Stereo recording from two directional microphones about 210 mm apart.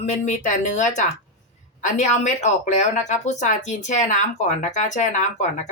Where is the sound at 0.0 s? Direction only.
35° left (ahead or behind).